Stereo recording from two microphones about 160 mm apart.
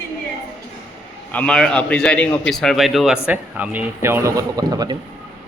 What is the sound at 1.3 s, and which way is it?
A man's voice, 5° left (ahead or behind).